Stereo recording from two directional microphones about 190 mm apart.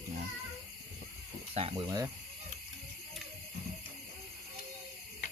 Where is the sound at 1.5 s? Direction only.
30° right (ahead or behind).